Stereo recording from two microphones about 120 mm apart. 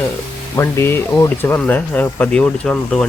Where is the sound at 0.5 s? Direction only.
20° left (ahead or behind).